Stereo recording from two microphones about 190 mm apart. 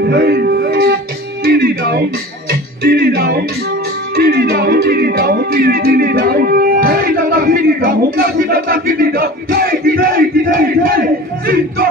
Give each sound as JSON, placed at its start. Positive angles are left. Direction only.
{"t": 0.0, "sound": "music", "side_deg": -55}